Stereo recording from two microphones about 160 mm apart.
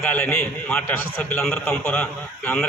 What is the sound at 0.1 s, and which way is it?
A man's voice, 10° left (ahead or behind).